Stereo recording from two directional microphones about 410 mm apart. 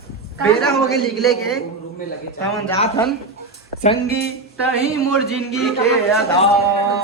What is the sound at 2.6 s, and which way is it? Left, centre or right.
Speech, centre.